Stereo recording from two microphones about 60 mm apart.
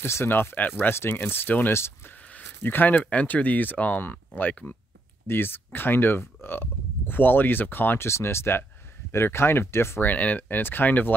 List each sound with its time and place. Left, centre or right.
0.0 s speech: left
0.9 s speech: left
1.7 s speech: left
2.3 s speech: left
8.1 s speech: left
10.0 s speech: left